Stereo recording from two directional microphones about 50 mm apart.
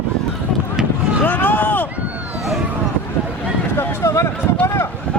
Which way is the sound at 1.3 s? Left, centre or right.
Left.